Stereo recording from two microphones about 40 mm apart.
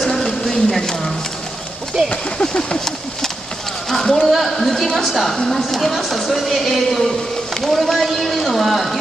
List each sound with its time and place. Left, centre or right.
0.2 s a sound: centre
2.0 s speech: left
3.9 s speech: centre